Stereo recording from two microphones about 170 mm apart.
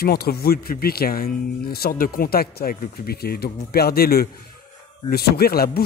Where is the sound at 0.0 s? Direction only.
65° left (ahead or behind).